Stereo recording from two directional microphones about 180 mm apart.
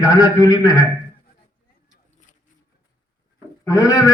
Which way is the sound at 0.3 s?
20° left (ahead or behind).